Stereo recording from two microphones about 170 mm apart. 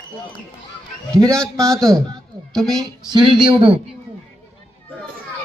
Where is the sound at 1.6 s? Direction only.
5° left (ahead or behind).